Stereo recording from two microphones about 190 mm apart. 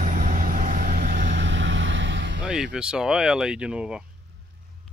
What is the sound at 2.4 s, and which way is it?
Speech, 5° right (ahead or behind).